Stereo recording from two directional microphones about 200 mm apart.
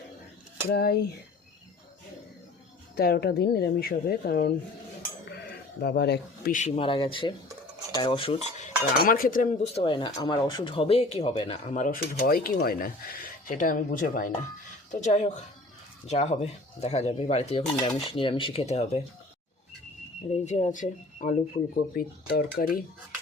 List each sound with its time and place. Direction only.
0.7 s a woman's voice: 50° left (ahead or behind)
2.9 s a woman's voice: 50° left (ahead or behind)
5.8 s a woman's voice: 55° left (ahead or behind)
6.6 s speech: 25° left (ahead or behind)
8.5 s a woman's voice: 40° left (ahead or behind)
9.8 s speech: 25° left (ahead or behind)
20.3 s speech: 35° left (ahead or behind)
22.3 s a woman's voice: 50° left (ahead or behind)